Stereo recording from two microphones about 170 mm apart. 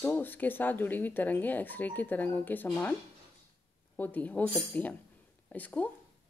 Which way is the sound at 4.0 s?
10° left (ahead or behind).